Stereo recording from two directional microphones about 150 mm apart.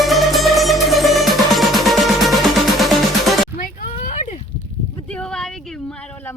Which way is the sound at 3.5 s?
65° left (ahead or behind).